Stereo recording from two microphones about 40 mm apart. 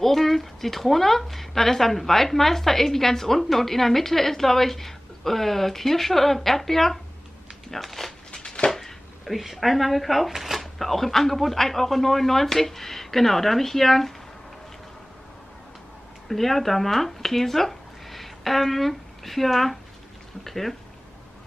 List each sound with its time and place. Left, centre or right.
0.0 s speech: centre
8.3 s a sound: centre
8.6 s chopping: centre
9.2 s speech: centre
16.3 s speech: centre